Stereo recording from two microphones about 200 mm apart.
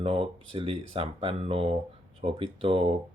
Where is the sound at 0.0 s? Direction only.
25° right (ahead or behind).